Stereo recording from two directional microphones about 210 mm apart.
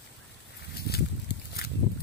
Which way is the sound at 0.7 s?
50° left (ahead or behind).